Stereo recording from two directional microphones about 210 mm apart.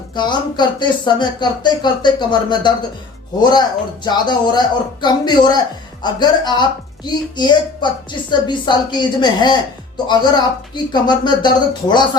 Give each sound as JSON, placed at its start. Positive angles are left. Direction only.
{"t": 0.2, "sound": "a woman's voice", "side_deg": 20}